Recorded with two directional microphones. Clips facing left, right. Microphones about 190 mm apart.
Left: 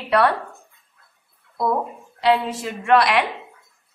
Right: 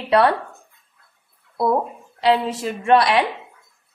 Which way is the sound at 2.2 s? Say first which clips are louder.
Right 1 dB; 30° right (ahead or behind).